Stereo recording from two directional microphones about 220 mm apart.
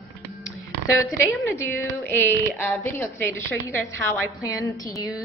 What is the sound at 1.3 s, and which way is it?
A woman's voice, 10° left (ahead or behind).